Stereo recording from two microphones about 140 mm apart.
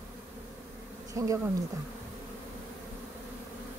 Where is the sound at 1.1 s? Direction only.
20° right (ahead or behind).